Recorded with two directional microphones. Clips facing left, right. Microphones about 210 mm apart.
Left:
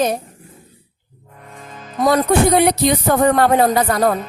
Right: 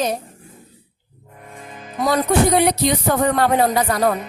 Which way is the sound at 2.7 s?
50° left (ahead or behind).